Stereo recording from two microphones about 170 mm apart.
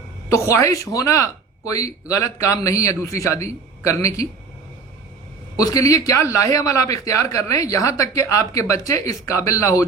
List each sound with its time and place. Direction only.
0.3 s speech: 20° left (ahead or behind)
5.5 s speech: 20° left (ahead or behind)